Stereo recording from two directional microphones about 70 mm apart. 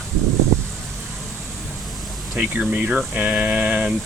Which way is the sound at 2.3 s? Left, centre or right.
Centre.